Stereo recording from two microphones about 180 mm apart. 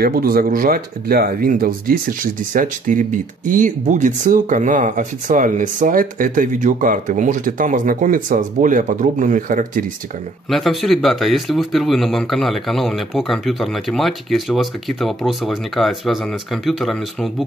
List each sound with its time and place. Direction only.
0.0 s speech: 55° right (ahead or behind)
10.5 s speech: centre (ahead or behind)